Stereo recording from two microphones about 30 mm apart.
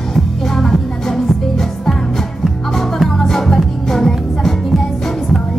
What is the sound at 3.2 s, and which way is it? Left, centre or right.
Music, centre.